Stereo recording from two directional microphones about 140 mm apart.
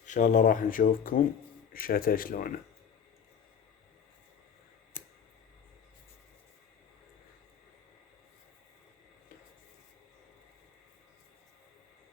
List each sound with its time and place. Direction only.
0.0 s speech: 60° left (ahead or behind); by 1.2 s 80° left
1.7 s speech: 90° left